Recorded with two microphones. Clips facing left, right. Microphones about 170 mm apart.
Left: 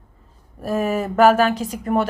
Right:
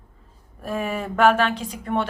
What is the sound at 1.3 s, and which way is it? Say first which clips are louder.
Speech: left 4 dB; 5° left (ahead or behind).